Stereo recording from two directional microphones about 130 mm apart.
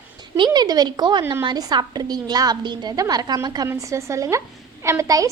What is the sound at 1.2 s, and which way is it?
Speech, 20° right (ahead or behind).